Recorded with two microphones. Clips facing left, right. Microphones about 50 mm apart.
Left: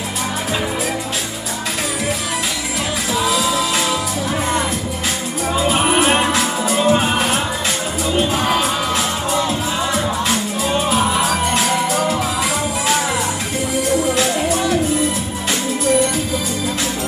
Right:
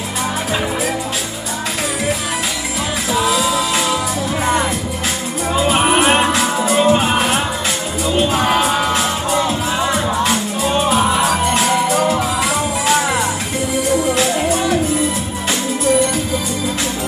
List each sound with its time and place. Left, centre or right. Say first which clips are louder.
3.3 s music: right 1 dB; centre
5.7 s music: right 2 dB; right
8.5 s music: right 3 dB; right